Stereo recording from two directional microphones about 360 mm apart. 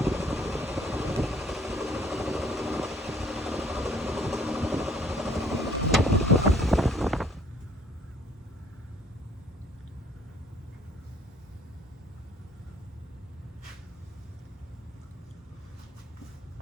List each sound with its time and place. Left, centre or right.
0.0 s vehicle: centre
6.5 s boat: centre